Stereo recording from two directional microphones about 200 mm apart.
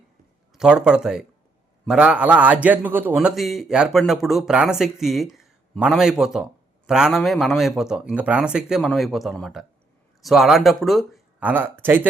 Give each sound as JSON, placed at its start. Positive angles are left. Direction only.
{"t": 0.5, "sound": "a man's voice", "side_deg": -5}